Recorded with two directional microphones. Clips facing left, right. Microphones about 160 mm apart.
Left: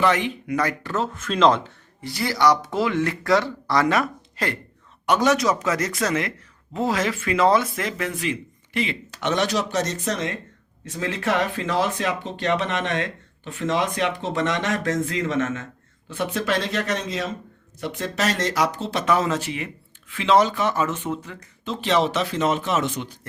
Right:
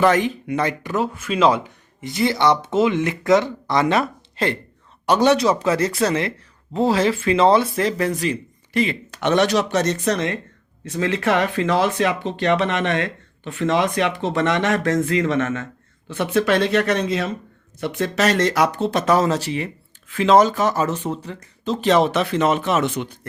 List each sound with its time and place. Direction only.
0.0 s speech: 40° right (ahead or behind)
0.4 s speech: 25° right (ahead or behind); by 1.7 s 10° right (ahead or behind)
2.0 s speech: 20° right (ahead or behind); by 23.1 s 60° right (ahead or behind)